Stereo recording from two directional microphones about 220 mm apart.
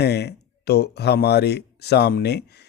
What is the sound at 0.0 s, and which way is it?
Speech, 50° left (ahead or behind).